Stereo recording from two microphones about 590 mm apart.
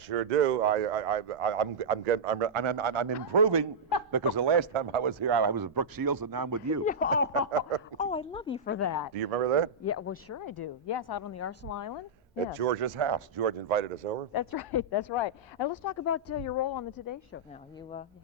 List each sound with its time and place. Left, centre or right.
0.1 s a man's voice: right
2.5 s speech: right
6.8 s a woman's voice: centre
9.1 s a man's voice: right
9.8 s a woman's voice: left
10.4 s a woman's voice: left
11.2 s a woman's voice: left
12.5 s speech: right
12.8 s speech: right
13.4 s speech: right
14.3 s a woman's voice: left